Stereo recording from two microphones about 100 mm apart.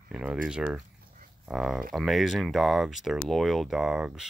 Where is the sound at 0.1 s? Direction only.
10° right (ahead or behind).